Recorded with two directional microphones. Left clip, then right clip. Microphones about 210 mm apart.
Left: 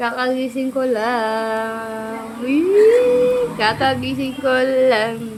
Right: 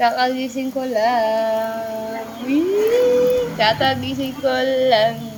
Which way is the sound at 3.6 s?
15° left (ahead or behind).